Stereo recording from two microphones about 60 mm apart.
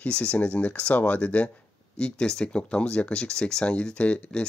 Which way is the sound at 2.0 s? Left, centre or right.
Centre.